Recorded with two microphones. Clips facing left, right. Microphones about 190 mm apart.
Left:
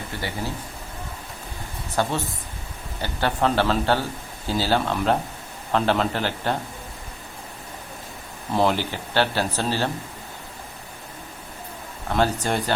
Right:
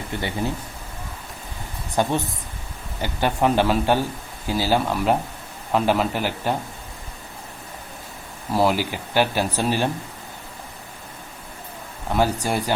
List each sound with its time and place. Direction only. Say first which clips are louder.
0.1 s a man's voice: right 5 dB; 20° right (ahead or behind)
2.0 s speech: right 3 dB; 15° right (ahead or behind)
8.5 s speech: right 1 dB; 10° right (ahead or behind)
12.1 s speech: right 1 dB; 10° right (ahead or behind)